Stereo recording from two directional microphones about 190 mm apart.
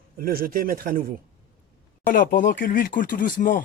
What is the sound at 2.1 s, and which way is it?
Speech, 45° left (ahead or behind).